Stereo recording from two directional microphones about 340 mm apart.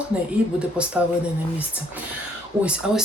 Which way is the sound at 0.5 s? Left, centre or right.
Centre.